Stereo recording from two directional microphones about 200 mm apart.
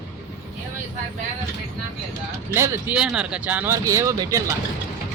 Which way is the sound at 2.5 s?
10° right (ahead or behind).